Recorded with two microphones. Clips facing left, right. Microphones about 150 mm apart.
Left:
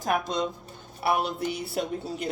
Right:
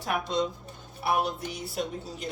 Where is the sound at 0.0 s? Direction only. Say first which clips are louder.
Left 1 dB; 45° left (ahead or behind).